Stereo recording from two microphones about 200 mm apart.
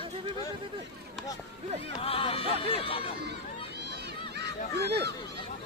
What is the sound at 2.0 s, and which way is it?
Speech, 30° left (ahead or behind).